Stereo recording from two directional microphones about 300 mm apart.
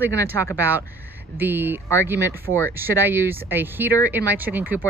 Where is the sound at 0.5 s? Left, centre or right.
Centre.